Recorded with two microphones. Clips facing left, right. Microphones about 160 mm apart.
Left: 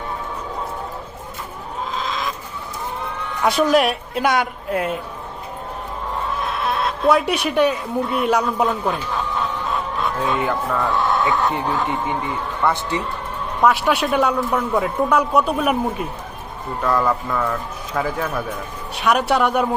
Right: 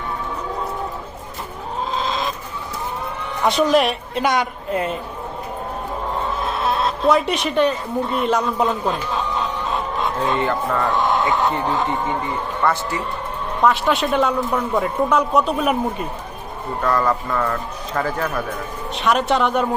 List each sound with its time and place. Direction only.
1.9 s chicken: 30° right (ahead or behind)
3.4 s a man's voice: 5° left (ahead or behind)
6.6 s a sound: 30° right (ahead or behind)
7.1 s speech: 5° left (ahead or behind)
10.2 s a man's voice: 5° left (ahead or behind)
10.8 s speech: 15° right (ahead or behind)
12.6 s a man's voice: 10° left (ahead or behind)